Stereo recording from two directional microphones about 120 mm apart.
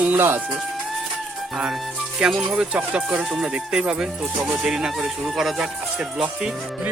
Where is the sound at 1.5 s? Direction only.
5° right (ahead or behind).